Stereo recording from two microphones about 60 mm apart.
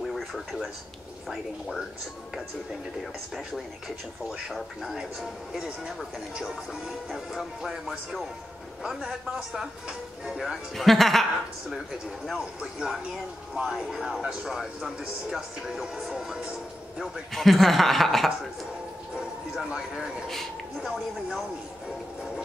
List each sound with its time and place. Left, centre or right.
0.1 s a sound: centre
4.3 s speech: centre
7.1 s speech: centre
9.5 s speech: centre
12.3 s speech: centre
13.6 s speech: centre
13.8 s speech: centre
17.3 s speech: centre
19.1 s speech: centre